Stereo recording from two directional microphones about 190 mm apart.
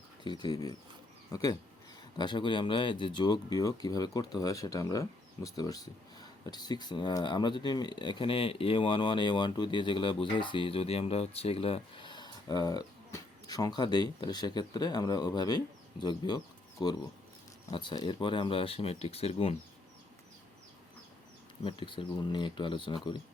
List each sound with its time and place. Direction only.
0.3 s speech: 25° left (ahead or behind)
21.6 s speech: 25° left (ahead or behind)